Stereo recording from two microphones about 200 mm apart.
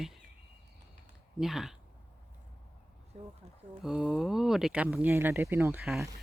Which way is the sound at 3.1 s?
35° right (ahead or behind).